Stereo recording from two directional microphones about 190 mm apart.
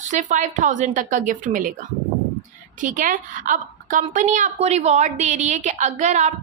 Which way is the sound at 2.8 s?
45° right (ahead or behind).